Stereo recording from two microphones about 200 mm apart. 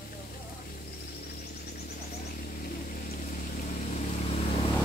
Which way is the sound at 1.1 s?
50° left (ahead or behind).